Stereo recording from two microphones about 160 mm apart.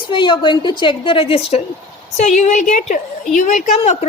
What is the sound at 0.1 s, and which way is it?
A woman's voice, 30° left (ahead or behind).